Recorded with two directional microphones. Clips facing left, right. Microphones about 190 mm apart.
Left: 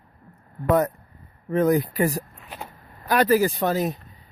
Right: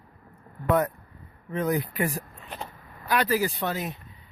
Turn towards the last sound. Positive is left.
turn(degrees=40)  # may be behind; listen again after turning